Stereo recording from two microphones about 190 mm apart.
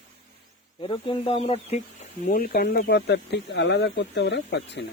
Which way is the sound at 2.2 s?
50° left (ahead or behind).